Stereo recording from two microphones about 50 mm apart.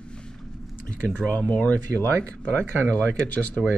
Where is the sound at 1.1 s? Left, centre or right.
Left.